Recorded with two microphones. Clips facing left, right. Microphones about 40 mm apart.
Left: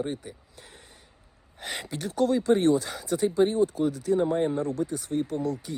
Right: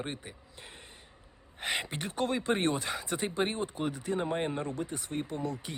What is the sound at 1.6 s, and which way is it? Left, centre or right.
Speech, right.